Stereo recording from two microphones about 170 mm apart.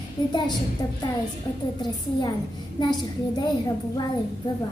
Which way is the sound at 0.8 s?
20° left (ahead or behind).